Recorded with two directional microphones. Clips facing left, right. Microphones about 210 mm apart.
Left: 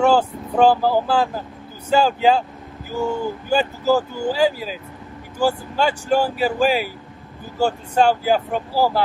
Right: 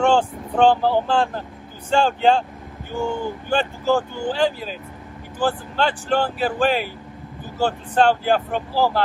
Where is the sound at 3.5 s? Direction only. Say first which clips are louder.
Left 2 dB; 5° left (ahead or behind).